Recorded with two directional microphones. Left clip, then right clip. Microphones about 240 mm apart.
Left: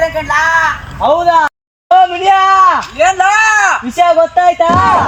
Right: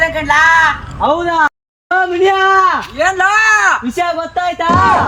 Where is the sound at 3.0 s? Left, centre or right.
Centre.